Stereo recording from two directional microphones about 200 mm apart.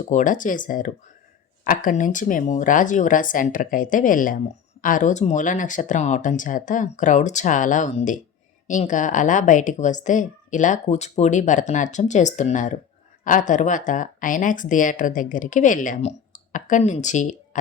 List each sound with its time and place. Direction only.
0.0 s speech: 40° left (ahead or behind)